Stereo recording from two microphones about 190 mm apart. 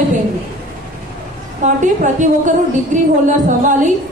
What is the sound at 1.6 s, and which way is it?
A woman's voice, 40° right (ahead or behind).